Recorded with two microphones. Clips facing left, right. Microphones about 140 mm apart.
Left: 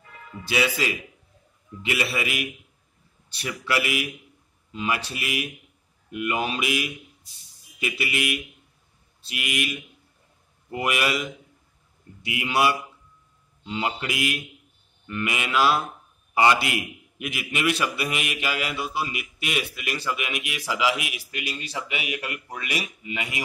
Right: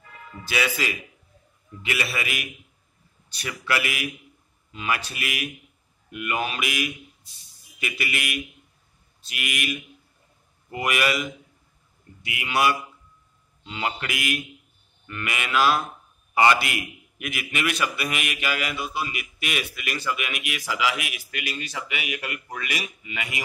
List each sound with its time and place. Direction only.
0.5 s a man's voice: 25° left (ahead or behind)